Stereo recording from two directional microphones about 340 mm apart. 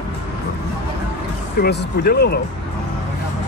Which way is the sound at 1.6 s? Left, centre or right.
Left.